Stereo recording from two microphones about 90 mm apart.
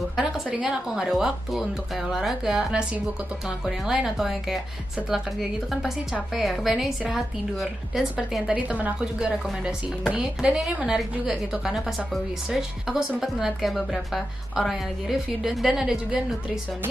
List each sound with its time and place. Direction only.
0.2 s a woman's voice: 10° right (ahead or behind)
5.7 s a woman's voice: centre (ahead or behind)